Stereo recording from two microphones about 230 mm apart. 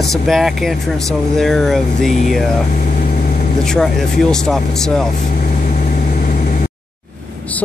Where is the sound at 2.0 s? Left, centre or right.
Left.